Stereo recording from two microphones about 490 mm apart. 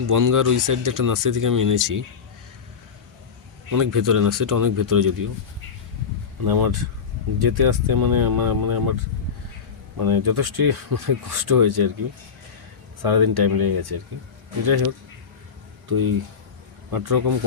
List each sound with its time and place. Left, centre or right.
0.0 s speech: right
3.7 s speech: right
6.4 s speech: right
10.0 s speech: right
13.0 s speech: right
15.9 s speech: right